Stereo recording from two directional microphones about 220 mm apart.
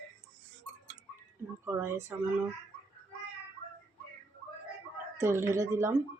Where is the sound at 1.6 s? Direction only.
10° right (ahead or behind).